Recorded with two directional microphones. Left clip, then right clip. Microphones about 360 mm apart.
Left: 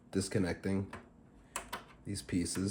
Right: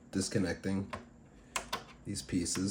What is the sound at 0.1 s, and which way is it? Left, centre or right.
Speech, centre.